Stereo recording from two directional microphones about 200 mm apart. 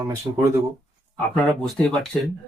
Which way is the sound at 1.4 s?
Centre (ahead or behind).